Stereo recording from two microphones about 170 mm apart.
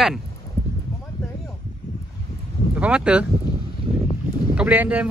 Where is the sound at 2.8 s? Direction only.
5° right (ahead or behind).